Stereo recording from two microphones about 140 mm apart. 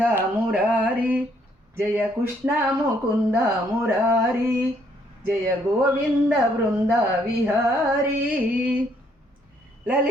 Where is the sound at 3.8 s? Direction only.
15° right (ahead or behind).